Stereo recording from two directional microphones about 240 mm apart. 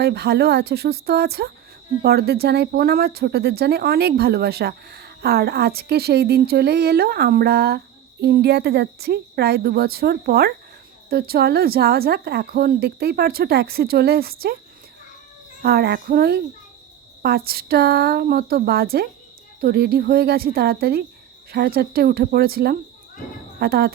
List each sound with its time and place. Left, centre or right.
0.0 s speech: right
15.6 s speech: right